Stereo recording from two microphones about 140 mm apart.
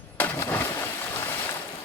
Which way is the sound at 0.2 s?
15° left (ahead or behind).